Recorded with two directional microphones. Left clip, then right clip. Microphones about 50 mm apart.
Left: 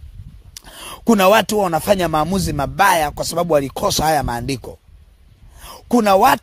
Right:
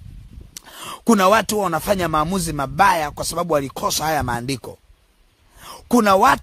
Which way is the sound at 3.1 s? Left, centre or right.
Centre.